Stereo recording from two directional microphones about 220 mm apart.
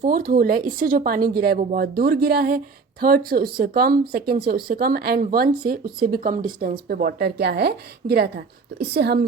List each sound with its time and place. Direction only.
0.0 s a woman's voice: 40° right (ahead or behind)